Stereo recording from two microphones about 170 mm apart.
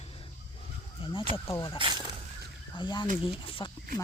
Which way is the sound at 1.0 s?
30° left (ahead or behind).